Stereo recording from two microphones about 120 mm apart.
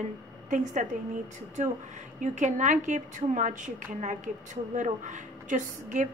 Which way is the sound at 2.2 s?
90° right.